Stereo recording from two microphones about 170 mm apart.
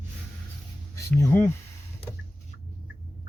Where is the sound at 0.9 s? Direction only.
15° left (ahead or behind).